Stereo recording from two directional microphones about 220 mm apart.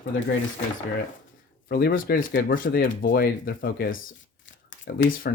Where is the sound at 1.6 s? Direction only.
40° left (ahead or behind).